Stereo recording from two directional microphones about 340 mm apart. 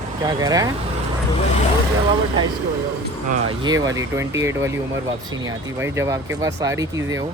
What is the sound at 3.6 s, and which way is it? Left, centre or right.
Speech, centre.